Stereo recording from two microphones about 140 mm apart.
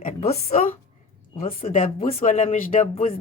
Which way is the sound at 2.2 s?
65° left (ahead or behind).